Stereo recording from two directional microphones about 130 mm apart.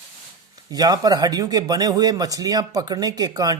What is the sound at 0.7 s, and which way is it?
Speech, 30° right (ahead or behind).